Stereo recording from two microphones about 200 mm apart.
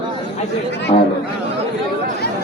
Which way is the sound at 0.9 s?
35° left (ahead or behind).